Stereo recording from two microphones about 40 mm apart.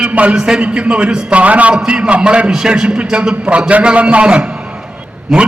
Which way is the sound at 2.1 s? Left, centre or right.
Right.